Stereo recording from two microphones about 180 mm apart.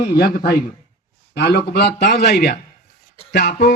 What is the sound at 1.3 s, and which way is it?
Speech, 65° left (ahead or behind).